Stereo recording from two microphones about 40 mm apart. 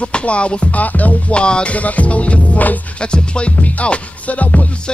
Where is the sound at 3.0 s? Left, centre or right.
Left.